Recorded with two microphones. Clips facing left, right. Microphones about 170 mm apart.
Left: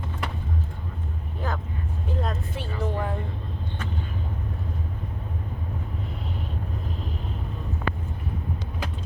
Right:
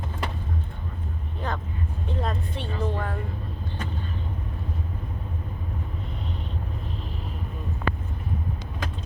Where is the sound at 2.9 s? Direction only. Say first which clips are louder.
Left 2 dB; 15° left (ahead or behind).